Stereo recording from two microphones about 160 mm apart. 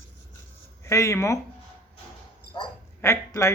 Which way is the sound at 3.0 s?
15° left (ahead or behind).